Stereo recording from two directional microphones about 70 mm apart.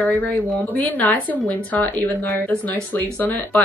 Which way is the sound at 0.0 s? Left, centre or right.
Left.